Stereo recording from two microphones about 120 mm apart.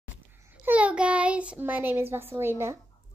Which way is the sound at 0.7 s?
10° right (ahead or behind).